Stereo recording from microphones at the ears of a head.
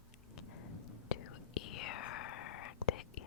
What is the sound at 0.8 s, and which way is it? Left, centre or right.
Whispering, left.